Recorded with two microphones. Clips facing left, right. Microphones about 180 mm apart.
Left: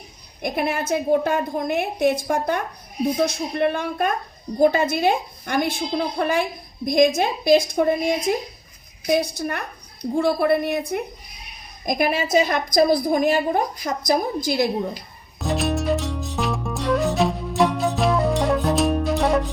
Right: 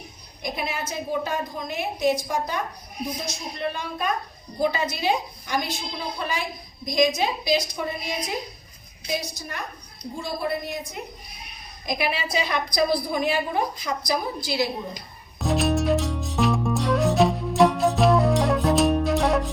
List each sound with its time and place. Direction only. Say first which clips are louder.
0.4 s a woman's voice: left 6 dB; 55° left (ahead or behind)
11.9 s a woman's voice: left 6 dB; 45° left (ahead or behind)
15.4 s music: right 1 dB; centre (ahead or behind)